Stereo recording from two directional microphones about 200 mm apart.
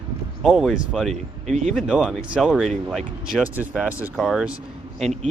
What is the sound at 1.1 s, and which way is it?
Speech, 35° right (ahead or behind).